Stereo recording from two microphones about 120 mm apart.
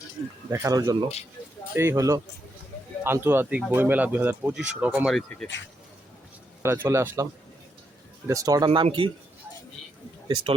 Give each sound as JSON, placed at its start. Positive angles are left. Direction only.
{"t": 0.5, "sound": "speech", "side_deg": -25}
{"t": 1.7, "sound": "speech", "side_deg": -20}
{"t": 6.6, "sound": "speech", "side_deg": -20}
{"t": 8.3, "sound": "speech", "side_deg": -30}
{"t": 8.7, "sound": "speech", "side_deg": -45}